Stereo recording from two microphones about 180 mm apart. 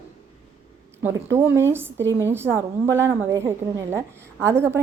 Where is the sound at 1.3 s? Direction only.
15° right (ahead or behind).